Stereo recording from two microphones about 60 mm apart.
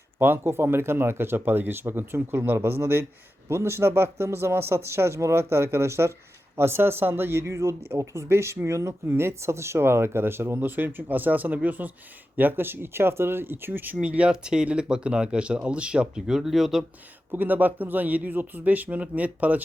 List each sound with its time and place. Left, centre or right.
0.2 s speech: right
14.0 s speech: right; by 16.8 s centre
17.3 s a man's voice: right